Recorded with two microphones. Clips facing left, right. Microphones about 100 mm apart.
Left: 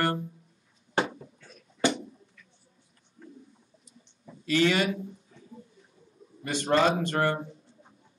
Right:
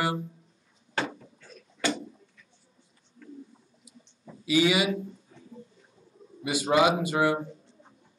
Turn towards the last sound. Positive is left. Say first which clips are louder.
# right 2 dB
turn(degrees=-10)  # may be behind; listen again after turning